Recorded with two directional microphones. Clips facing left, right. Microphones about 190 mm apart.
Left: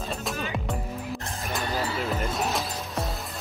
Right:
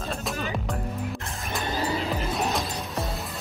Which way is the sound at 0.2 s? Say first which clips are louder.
Right 1 dB; centre (ahead or behind).